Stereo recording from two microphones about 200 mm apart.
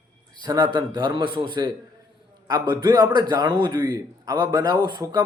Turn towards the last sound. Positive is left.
turn(degrees=-20)  # may be behind; listen again after turning